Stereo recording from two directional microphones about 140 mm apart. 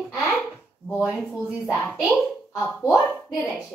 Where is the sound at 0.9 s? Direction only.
5° right (ahead or behind).